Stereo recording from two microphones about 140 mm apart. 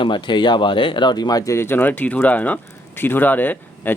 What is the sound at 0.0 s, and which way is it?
Speech, 35° left (ahead or behind).